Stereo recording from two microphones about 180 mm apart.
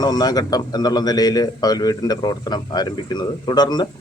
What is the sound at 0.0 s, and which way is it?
Speech, 20° left (ahead or behind).